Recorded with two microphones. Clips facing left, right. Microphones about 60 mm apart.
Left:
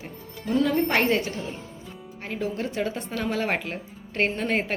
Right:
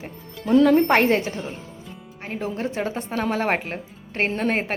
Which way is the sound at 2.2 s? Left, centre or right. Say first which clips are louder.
Right 2 dB; right.